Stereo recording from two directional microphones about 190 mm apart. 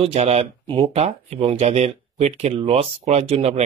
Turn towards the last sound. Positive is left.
turn(degrees=-35)  # may be behind; listen again after turning